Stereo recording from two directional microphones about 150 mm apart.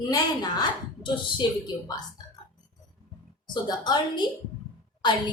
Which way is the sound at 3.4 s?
30° left (ahead or behind).